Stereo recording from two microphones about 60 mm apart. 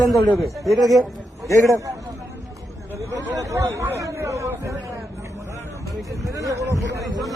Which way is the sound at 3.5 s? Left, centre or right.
Right.